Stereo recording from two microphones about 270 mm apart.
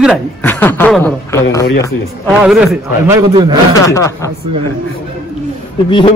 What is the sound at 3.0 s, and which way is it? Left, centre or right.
Speech, centre.